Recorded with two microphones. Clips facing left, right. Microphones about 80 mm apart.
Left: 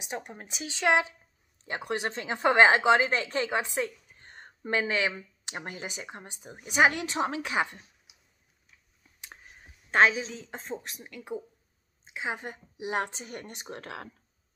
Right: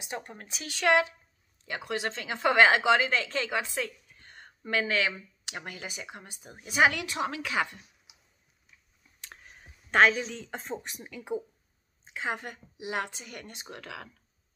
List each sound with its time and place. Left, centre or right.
0.1 s speech: centre
9.2 s a sound: centre
10.2 s speech: centre
12.1 s a woman's voice: centre
12.7 s a woman's voice: left